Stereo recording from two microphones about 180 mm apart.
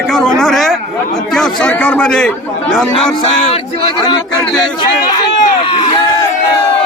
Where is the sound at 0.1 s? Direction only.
Centre (ahead or behind).